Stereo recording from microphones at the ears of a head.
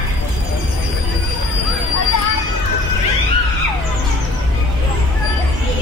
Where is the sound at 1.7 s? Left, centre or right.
Left.